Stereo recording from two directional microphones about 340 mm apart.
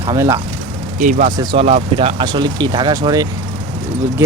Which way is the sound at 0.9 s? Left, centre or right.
Right.